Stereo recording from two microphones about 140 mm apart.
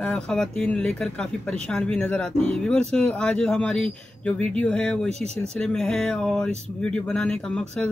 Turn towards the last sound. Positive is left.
turn(degrees=5)  # may be behind; listen again after turning